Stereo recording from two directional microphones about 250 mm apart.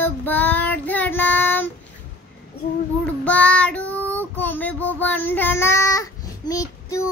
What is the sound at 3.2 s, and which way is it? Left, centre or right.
Child singing, centre.